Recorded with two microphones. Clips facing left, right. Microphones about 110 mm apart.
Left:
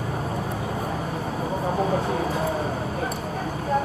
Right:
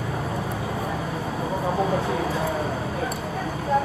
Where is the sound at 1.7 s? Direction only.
35° left (ahead or behind).